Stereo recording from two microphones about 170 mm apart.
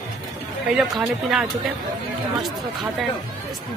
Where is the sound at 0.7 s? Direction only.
Centre (ahead or behind).